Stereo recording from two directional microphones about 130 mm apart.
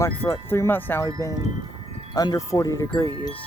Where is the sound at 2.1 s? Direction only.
30° left (ahead or behind).